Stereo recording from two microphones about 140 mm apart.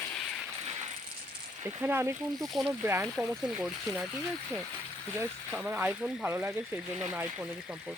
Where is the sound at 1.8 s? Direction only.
15° right (ahead or behind).